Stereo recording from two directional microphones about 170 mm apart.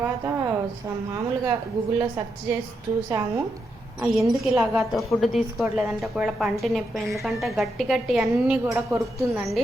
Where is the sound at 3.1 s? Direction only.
20° right (ahead or behind).